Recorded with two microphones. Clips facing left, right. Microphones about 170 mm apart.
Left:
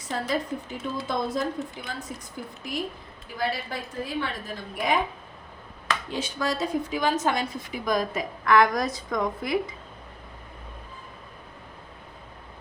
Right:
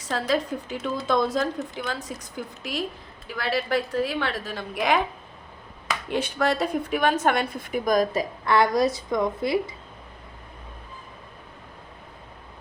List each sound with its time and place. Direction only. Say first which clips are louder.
0.0 s a woman's voice: right 3 dB; 90° right
6.1 s a woman's voice: right 7 dB; 60° right (ahead or behind); by 8.2 s 45° right (ahead or behind)
8.4 s a woman's voice: even; 30° right (ahead or behind)